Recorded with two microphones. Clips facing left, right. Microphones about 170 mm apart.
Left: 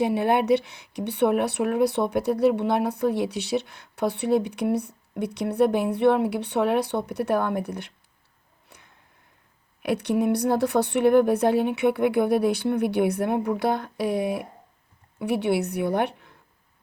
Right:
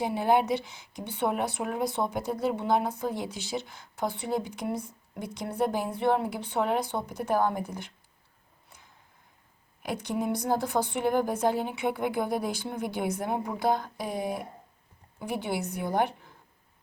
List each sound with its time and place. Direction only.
0.0 s speech: 65° left (ahead or behind)
9.8 s speech: 65° left (ahead or behind)